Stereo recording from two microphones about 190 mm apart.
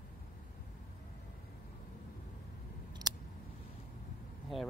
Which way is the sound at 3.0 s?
20° right (ahead or behind).